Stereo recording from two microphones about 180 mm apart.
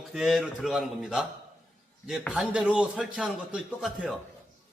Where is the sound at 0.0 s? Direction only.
Centre (ahead or behind).